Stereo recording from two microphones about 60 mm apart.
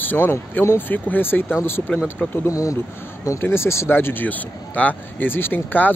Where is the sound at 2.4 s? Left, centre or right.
Left.